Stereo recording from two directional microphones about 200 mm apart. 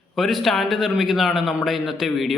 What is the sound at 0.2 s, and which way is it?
A man's voice, centre (ahead or behind).